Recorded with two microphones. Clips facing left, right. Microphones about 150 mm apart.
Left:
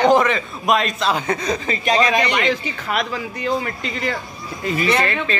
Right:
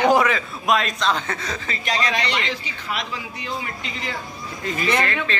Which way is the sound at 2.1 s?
50° left (ahead or behind).